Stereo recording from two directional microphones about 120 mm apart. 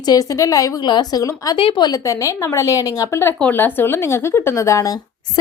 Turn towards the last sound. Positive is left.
turn(degrees=30)  # may be behind; listen again after turning